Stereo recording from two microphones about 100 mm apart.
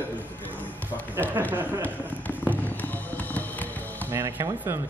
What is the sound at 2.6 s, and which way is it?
Music, 15° left (ahead or behind).